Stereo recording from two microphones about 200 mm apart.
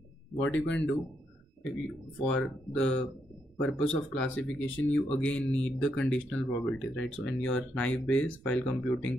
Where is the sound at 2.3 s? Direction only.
5° left (ahead or behind).